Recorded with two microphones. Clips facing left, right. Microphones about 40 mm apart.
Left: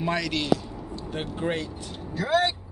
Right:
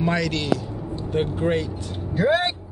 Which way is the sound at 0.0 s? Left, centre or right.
Centre.